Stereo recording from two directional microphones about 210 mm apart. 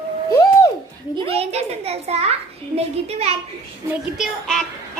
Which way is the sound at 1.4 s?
30° right (ahead or behind).